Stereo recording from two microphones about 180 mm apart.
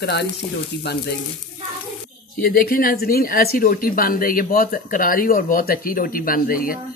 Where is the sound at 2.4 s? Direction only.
55° left (ahead or behind).